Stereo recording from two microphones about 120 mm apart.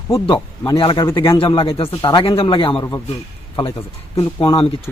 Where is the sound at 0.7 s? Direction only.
40° left (ahead or behind).